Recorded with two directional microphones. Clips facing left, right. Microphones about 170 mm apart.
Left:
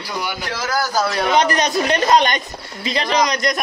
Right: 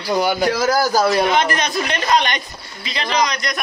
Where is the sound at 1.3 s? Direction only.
40° left (ahead or behind).